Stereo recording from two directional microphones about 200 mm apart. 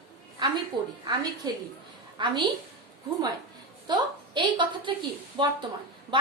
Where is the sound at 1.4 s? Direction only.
20° right (ahead or behind).